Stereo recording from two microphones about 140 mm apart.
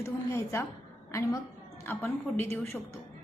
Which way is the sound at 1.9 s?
15° left (ahead or behind).